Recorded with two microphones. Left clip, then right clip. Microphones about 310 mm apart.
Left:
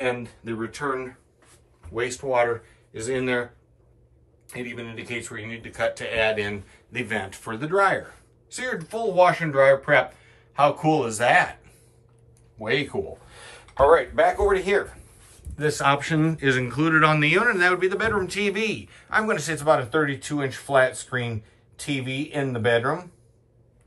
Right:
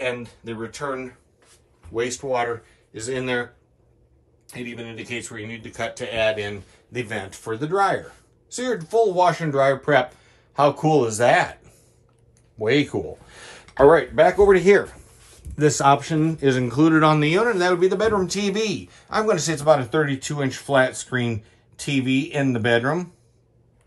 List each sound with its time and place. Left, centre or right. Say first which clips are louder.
0.0 s speech: even; centre
4.5 s speech: even; centre; by 11.5 s right
13.8 s speech: right 3 dB; right